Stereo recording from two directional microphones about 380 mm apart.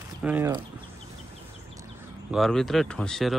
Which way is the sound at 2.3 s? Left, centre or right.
Centre.